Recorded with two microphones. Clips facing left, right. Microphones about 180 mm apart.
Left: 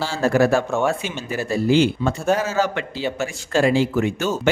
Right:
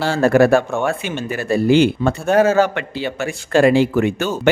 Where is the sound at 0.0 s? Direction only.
60° right (ahead or behind).